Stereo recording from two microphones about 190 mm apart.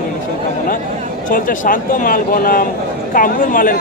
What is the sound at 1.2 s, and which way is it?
Speech, 45° left (ahead or behind).